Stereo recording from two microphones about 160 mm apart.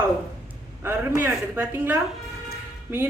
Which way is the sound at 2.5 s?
15° right (ahead or behind).